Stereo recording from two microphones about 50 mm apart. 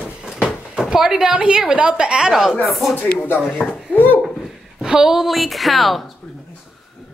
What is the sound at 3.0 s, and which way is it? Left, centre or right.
Speech, left.